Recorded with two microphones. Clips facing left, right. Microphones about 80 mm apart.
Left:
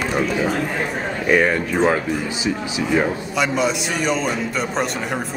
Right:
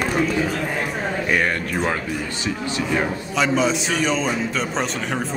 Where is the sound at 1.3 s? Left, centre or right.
Centre.